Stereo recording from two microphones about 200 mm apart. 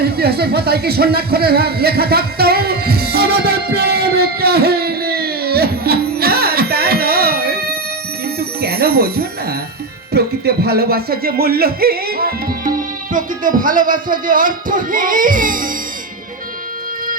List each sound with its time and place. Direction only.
0.0 s a sound: 50° right (ahead or behind)
8.4 s music: 50° right (ahead or behind)
10.1 s speech: 50° right (ahead or behind)